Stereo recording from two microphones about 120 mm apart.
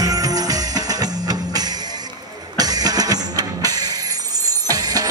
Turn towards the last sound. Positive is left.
turn(degrees=-30)  # may be behind; listen again after turning